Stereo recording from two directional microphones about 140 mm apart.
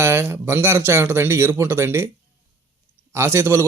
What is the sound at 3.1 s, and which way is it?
Speech, 20° right (ahead or behind).